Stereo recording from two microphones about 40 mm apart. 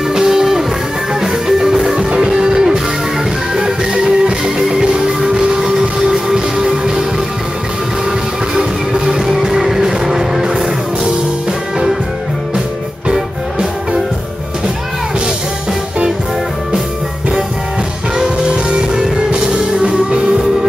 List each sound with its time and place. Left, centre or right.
0.1 s music: centre
8.5 s music: centre
13.1 s music: centre
18.9 s music: centre